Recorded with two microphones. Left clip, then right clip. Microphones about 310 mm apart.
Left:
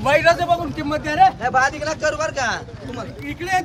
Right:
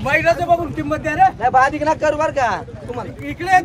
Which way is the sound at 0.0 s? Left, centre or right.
Centre.